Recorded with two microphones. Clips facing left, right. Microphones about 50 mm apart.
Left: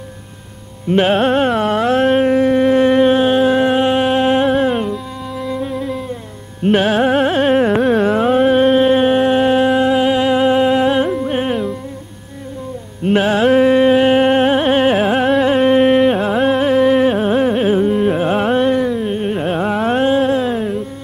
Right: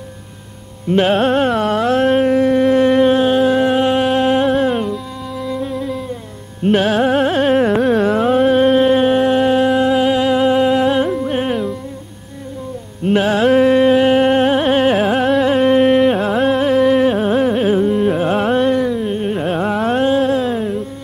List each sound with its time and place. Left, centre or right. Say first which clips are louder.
0.9 s carnatic music: even; centre
5.4 s music: even; centre
6.6 s carnatic music: left 1 dB; centre
11.1 s music: even; centre
13.0 s music: even; centre
13.5 s carnatic music: even; centre